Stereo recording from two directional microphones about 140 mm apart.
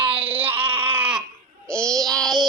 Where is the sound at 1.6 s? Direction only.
5° left (ahead or behind).